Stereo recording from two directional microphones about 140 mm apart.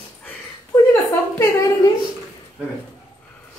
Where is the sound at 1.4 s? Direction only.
25° left (ahead or behind).